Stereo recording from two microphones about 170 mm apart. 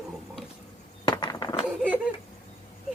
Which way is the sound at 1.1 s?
25° left (ahead or behind).